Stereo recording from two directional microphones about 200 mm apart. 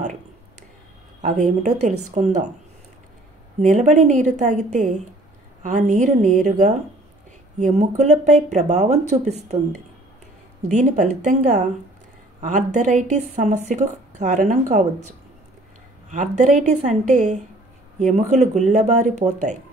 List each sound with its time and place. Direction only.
1.2 s speech: 40° right (ahead or behind)
3.5 s speech: 35° right (ahead or behind)
10.7 s speech: 35° right (ahead or behind)
12.4 s speech: 35° right (ahead or behind)